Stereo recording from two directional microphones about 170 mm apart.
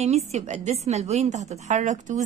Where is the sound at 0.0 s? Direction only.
40° right (ahead or behind).